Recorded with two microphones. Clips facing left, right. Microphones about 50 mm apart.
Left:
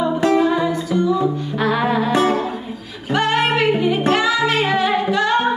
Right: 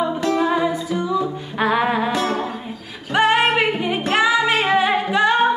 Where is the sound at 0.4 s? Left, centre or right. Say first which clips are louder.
Left 2 dB; centre.